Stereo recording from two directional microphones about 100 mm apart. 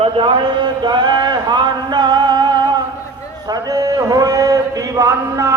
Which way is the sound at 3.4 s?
40° right (ahead or behind).